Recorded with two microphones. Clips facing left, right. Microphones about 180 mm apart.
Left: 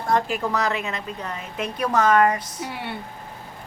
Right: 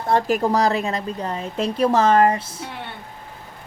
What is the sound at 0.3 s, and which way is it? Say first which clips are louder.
A woman's voice: right 6 dB; 40° right (ahead or behind).